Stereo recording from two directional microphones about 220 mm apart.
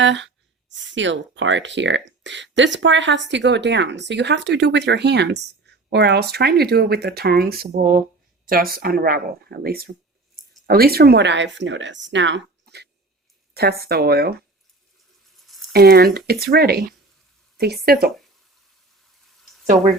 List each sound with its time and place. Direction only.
0.0 s speech: 55° right (ahead or behind)
15.4 s a sound: centre (ahead or behind)
15.7 s speech: 45° right (ahead or behind)
17.8 s speech: 45° right (ahead or behind)